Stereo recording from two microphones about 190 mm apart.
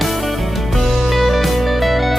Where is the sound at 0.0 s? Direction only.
Centre (ahead or behind).